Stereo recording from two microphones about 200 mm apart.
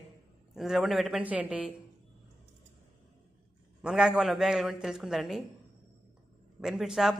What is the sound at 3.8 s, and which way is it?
A man's voice, 5° right (ahead or behind).